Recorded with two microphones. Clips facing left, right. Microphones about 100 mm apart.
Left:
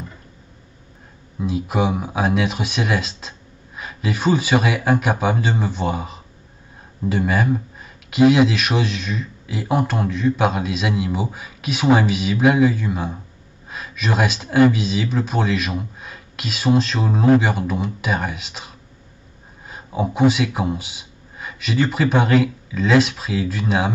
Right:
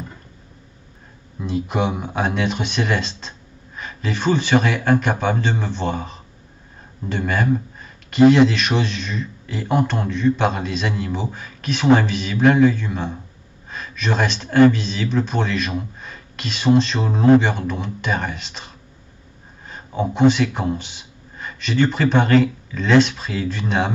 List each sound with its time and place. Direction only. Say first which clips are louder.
1.4 s speech: left 1 dB; 5° left (ahead or behind)